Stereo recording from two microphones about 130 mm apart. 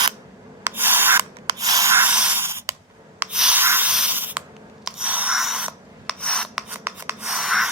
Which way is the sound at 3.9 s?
10° right (ahead or behind).